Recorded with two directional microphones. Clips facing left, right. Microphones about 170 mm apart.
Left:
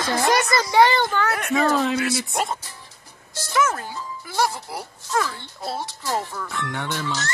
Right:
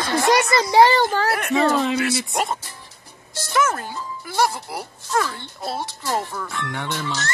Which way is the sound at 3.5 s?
55° right (ahead or behind).